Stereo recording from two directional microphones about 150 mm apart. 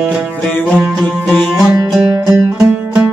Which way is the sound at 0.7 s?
5° right (ahead or behind).